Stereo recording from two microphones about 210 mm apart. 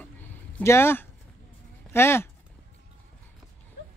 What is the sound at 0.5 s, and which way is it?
Speech, 10° left (ahead or behind).